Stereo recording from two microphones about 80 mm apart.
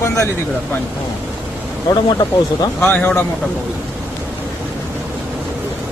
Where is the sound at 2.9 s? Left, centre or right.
Left.